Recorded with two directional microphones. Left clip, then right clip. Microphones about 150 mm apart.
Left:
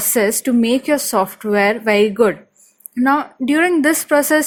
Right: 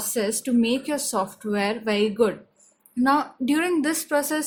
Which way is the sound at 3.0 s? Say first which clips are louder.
Left 5 dB; 30° left (ahead or behind).